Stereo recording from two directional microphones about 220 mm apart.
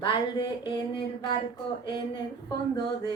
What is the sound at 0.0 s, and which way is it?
Speech, 20° left (ahead or behind).